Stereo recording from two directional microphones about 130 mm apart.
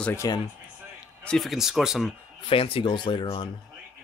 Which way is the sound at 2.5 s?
45° left (ahead or behind).